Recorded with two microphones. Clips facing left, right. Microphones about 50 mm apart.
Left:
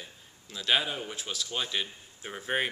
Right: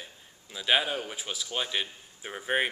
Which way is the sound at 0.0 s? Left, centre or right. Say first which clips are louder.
Right 1 dB; centre.